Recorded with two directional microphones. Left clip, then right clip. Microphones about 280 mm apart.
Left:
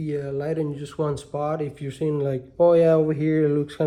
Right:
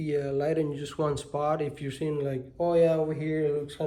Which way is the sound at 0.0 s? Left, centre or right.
Centre.